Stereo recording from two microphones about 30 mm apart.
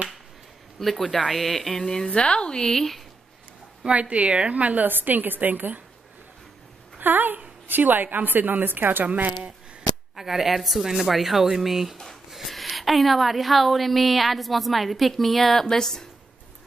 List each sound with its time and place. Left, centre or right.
0.7 s speech: centre
1.7 s speech: centre
2.0 s a woman's voice: left
2.7 s speech: centre
3.9 s a woman's voice: right
4.8 s a woman's voice: right
7.0 s a woman's voice: right
10.1 s a woman's voice: centre